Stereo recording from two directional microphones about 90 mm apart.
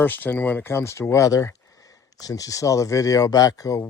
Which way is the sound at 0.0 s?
20° left (ahead or behind).